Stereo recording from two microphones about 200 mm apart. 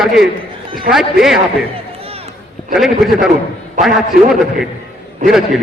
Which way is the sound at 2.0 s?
30° right (ahead or behind).